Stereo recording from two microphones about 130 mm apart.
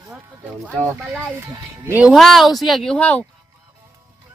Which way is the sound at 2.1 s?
Centre (ahead or behind).